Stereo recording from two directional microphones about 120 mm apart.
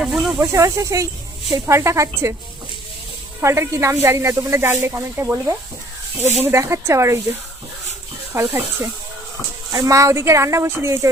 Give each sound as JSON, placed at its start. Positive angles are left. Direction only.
{"t": 0.0, "sound": "snake", "side_deg": -5}
{"t": 0.3, "sound": "speech", "side_deg": -25}
{"t": 3.4, "sound": "speech", "side_deg": -25}
{"t": 8.3, "sound": "speech", "side_deg": -20}